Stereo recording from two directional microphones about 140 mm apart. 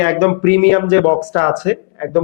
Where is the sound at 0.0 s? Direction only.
15° left (ahead or behind).